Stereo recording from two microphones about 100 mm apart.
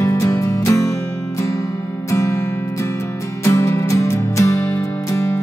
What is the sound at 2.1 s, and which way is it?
Music, 30° left (ahead or behind).